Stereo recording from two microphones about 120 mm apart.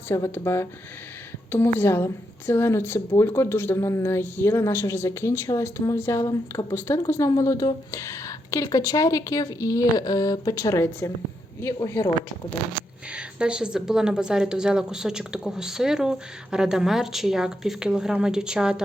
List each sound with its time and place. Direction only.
0.1 s a woman's voice: 20° left (ahead or behind)
13.1 s speech: 10° right (ahead or behind)